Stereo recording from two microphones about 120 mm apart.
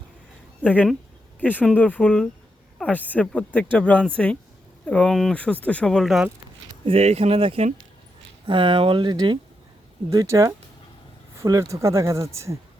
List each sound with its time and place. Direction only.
0.6 s speech: 15° left (ahead or behind)
6.8 s speech: 60° right (ahead or behind); by 12.5 s 25° right (ahead or behind)